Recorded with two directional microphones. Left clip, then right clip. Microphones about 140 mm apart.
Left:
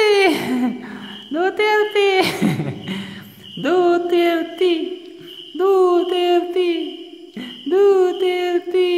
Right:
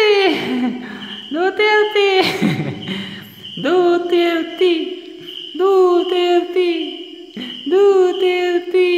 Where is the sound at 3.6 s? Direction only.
10° left (ahead or behind).